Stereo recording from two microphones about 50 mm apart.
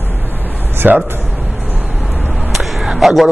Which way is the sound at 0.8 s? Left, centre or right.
Right.